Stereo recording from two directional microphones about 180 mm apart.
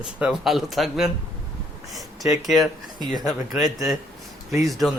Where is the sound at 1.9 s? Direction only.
Centre (ahead or behind).